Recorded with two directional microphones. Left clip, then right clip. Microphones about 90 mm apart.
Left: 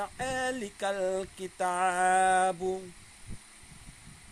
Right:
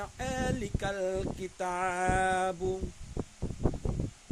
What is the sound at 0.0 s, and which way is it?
Speech, 25° right (ahead or behind).